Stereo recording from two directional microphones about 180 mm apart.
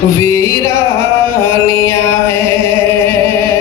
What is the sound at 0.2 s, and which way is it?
Music, 15° left (ahead or behind).